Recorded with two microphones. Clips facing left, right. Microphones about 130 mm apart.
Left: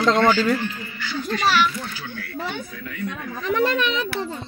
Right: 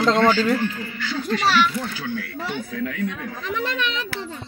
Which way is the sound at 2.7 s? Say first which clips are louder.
Right 5 dB; 85° right.